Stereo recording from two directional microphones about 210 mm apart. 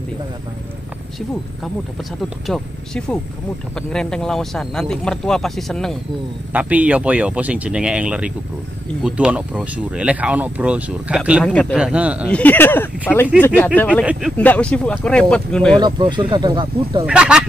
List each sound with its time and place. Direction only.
2.2 s speech: centre (ahead or behind)
11.4 s speech: 5° left (ahead or behind)
12.3 s speech: 5° left (ahead or behind)
15.7 s speech: 20° right (ahead or behind)
17.0 s speech: 5° right (ahead or behind)